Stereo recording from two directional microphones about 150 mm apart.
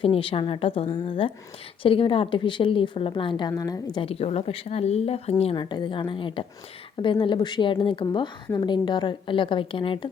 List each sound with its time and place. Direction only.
0.0 s a woman's voice: 40° left (ahead or behind)
4.0 s speech: 40° left (ahead or behind)